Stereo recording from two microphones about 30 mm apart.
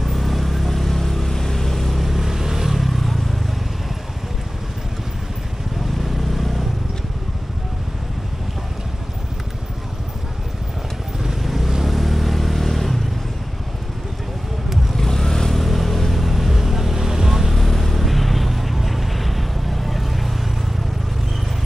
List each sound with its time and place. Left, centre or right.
0.0 s vehicle: centre
5.9 s vehicle: centre
11.4 s vehicle: centre
15.0 s vehicle: centre
15.5 s vehicle: centre
17.6 s vehicle: centre